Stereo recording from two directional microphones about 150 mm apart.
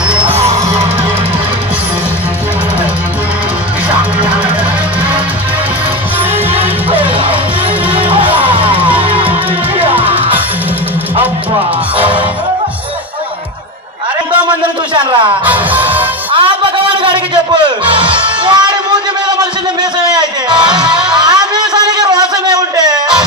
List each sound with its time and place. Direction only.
0.1 s music: 10° right (ahead or behind)
6.5 s music: 40° right (ahead or behind)
9.8 s music: 35° right (ahead or behind)
15.0 s music: 30° right (ahead or behind)
15.4 s music: 10° right (ahead or behind)
16.3 s music: 35° right (ahead or behind)
19.8 s a sound: 30° right (ahead or behind)
21.0 s music: 30° right (ahead or behind)